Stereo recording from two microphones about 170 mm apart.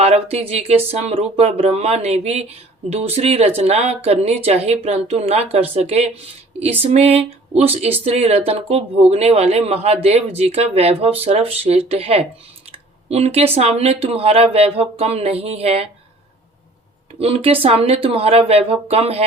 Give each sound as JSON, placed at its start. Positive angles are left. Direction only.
{"t": 0.0, "sound": "speech", "side_deg": -35}
{"t": 12.7, "sound": "a sound", "side_deg": -40}
{"t": 13.6, "sound": "speech", "side_deg": -40}
{"t": 17.2, "sound": "speech", "side_deg": -35}